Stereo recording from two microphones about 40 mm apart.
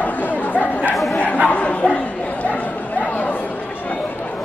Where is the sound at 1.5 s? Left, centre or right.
Left.